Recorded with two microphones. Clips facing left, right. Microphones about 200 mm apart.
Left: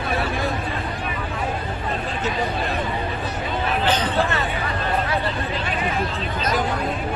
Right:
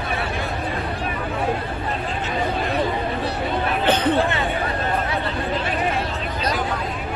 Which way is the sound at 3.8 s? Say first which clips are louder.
Right 3 dB; 55° right (ahead or behind).